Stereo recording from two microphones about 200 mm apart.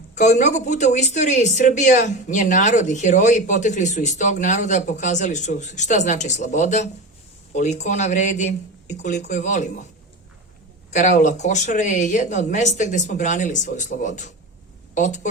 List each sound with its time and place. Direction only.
0.1 s a woman's voice: 35° left (ahead or behind)
10.9 s speech: 40° left (ahead or behind)